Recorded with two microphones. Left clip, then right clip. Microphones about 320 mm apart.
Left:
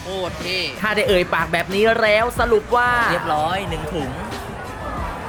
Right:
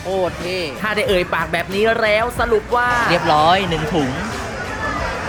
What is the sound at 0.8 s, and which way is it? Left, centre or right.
Speech, centre.